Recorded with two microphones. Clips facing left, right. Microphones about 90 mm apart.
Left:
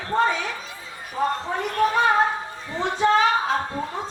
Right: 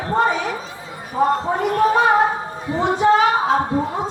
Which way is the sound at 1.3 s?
40° right (ahead or behind).